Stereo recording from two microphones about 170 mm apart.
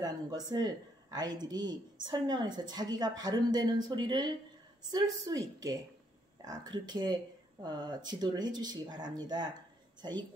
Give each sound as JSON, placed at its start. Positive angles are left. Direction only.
{"t": 0.0, "sound": "a woman's voice", "side_deg": -25}